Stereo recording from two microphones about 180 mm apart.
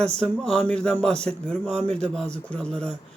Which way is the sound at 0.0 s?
5° left (ahead or behind).